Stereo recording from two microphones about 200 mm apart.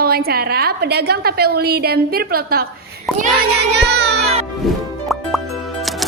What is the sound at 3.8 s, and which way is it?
Speech, 60° right (ahead or behind).